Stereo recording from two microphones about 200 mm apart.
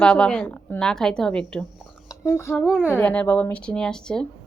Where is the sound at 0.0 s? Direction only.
5° left (ahead or behind).